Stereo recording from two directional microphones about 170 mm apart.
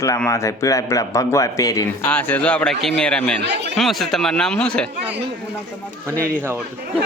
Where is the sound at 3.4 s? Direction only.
90° right.